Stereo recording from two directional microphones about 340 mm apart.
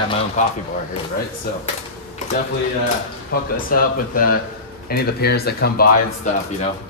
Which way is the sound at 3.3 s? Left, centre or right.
Left.